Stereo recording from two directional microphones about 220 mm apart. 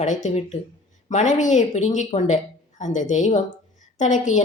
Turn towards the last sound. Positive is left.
turn(degrees=35)  # may be behind; listen again after turning